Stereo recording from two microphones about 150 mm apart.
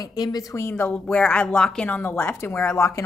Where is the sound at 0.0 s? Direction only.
25° left (ahead or behind).